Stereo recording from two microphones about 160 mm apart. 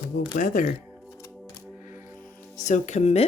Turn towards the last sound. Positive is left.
turn(degrees=45)  # may be behind; listen again after turning